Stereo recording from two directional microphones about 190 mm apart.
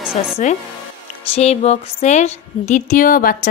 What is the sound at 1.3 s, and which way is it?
A woman's voice, 35° left (ahead or behind).